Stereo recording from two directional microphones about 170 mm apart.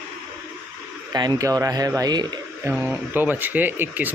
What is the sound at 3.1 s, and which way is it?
Speech, 10° right (ahead or behind).